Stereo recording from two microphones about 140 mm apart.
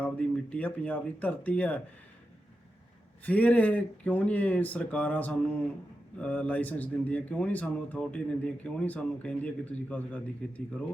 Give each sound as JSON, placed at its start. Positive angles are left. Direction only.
{"t": 0.0, "sound": "speech", "side_deg": 10}
{"t": 3.2, "sound": "speech", "side_deg": 10}